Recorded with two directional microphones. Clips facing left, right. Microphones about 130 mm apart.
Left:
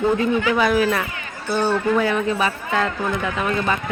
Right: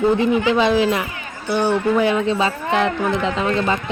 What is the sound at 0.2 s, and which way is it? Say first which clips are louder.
Speech: right 2 dB; 25° right (ahead or behind).